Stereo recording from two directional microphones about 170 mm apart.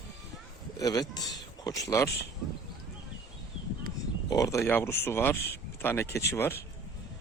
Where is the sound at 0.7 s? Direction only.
20° left (ahead or behind).